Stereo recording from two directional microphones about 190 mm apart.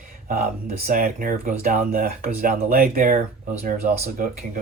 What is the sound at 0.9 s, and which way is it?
Speech, 45° right (ahead or behind).